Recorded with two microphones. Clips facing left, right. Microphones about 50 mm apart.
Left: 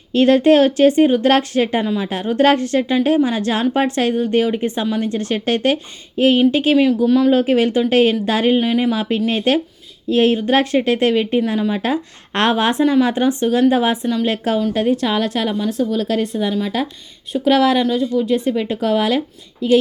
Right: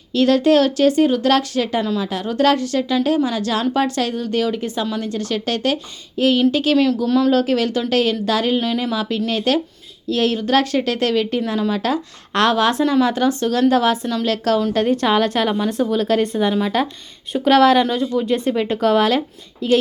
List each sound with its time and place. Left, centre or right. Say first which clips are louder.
0.1 s speech: left 2 dB; left
6.7 s speech: left 2 dB; centre
14.6 s a woman's voice: even; centre
15.5 s speech: even; centre
17.5 s a woman's voice: right 2 dB; centre